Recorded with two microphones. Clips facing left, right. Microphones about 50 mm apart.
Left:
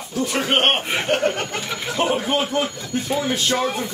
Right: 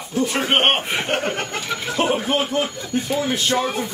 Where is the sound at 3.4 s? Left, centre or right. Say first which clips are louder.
Even; centre.